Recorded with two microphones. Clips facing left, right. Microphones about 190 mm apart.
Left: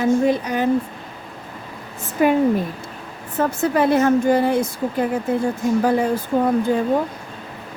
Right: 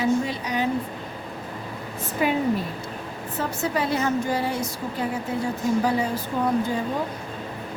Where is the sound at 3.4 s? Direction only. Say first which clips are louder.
Left 8 dB; 55° left (ahead or behind).